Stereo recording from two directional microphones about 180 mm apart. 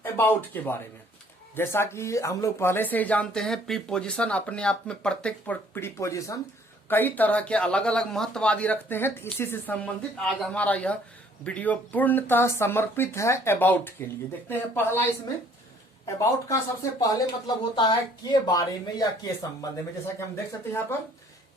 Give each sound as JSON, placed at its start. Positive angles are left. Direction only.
{"t": 0.0, "sound": "speech", "side_deg": 10}
{"t": 16.0, "sound": "speech", "side_deg": 15}